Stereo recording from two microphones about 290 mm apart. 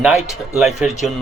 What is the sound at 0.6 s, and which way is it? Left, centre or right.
Speech, centre.